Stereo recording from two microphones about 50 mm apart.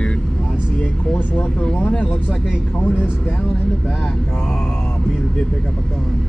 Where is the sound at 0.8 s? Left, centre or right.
Left.